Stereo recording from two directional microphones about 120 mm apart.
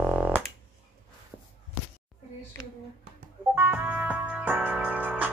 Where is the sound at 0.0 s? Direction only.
10° right (ahead or behind).